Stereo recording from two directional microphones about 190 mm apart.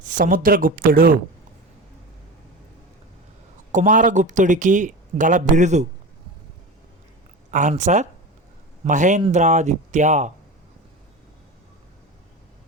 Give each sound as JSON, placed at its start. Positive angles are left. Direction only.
{"t": 0.0, "sound": "speech", "side_deg": -45}
{"t": 3.7, "sound": "speech", "side_deg": -40}
{"t": 7.5, "sound": "speech", "side_deg": -40}